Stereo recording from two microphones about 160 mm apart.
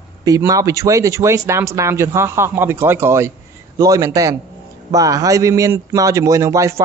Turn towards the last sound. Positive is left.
turn(degrees=-20)  # may be behind; listen again after turning